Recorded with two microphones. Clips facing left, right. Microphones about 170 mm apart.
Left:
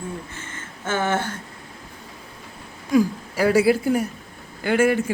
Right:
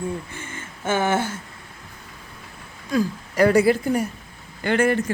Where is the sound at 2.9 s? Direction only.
10° left (ahead or behind).